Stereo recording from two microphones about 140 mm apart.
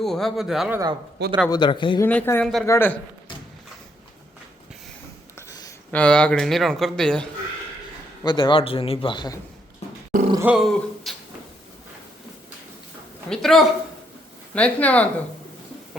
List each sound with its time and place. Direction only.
0.0 s a man's voice: centre (ahead or behind)
0.8 s speech: 30° right (ahead or behind)
1.5 s a man's voice: 35° left (ahead or behind)
2.0 s speech: 15° left (ahead or behind)
2.4 s a man's voice: centre (ahead or behind)
2.6 s speech: 15° left (ahead or behind)
5.5 s a sound: 25° left (ahead or behind)
5.9 s a man's voice: 10° left (ahead or behind)
8.2 s a man's voice: 35° left (ahead or behind)
10.4 s a man's voice: 5° right (ahead or behind)
13.3 s a man's voice: centre (ahead or behind)